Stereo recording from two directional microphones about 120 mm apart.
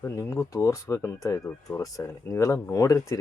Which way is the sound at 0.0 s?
25° left (ahead or behind).